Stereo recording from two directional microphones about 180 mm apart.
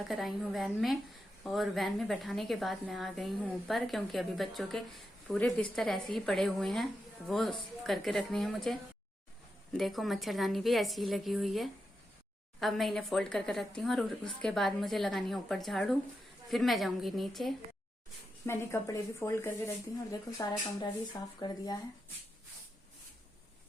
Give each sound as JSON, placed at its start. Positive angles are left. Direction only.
{"t": 0.1, "sound": "a woman's voice", "side_deg": 0}
{"t": 18.4, "sound": "speech", "side_deg": 15}